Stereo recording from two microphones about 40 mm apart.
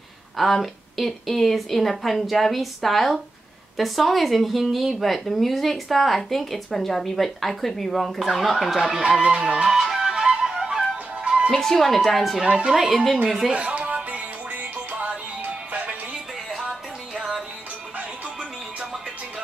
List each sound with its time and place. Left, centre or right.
0.4 s speech: centre
9.3 s music: right
9.7 s music: centre
10.4 s flute: centre
11.2 s music: right
11.5 s speech: centre
12.4 s music: right
12.7 s speech: centre
13.5 s music: right